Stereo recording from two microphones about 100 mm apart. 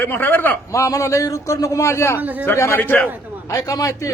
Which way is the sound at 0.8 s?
30° left (ahead or behind).